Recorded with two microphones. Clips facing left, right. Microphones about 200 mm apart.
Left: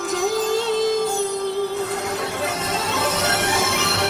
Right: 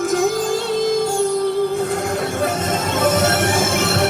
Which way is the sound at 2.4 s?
50° right (ahead or behind).